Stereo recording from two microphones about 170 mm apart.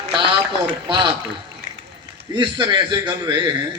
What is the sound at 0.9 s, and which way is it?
Speech, 30° right (ahead or behind).